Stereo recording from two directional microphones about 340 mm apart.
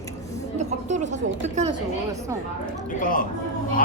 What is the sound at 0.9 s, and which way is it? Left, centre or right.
Speech, right.